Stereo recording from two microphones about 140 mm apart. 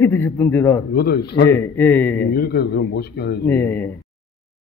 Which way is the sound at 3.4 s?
15° left (ahead or behind).